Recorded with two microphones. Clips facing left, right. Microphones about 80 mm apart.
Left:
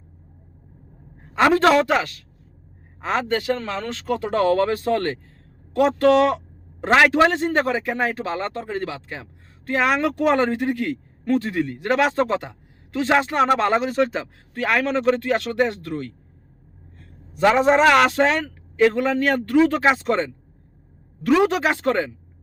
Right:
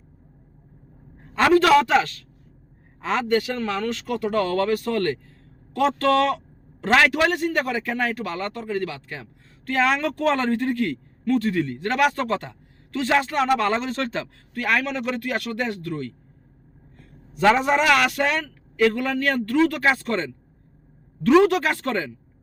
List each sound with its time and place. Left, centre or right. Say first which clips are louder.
1.5 s a man's voice: even; left
1.9 s a woman's voice: right 1 dB; centre
14.5 s a man's voice: left 3 dB; left
17.4 s a man's voice: left 3 dB; centre
21.4 s a man's voice: left 1 dB; centre